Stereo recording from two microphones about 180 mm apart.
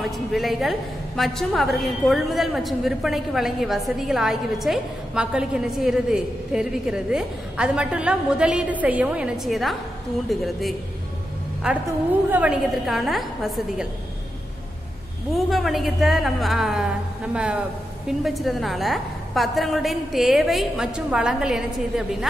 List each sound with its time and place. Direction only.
0.0 s a woman's voice: centre (ahead or behind)
11.6 s a woman's voice: 10° right (ahead or behind)
15.3 s a woman's voice: centre (ahead or behind)